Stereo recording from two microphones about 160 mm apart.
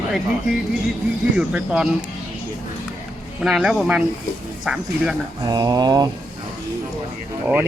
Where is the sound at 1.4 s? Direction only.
5° right (ahead or behind).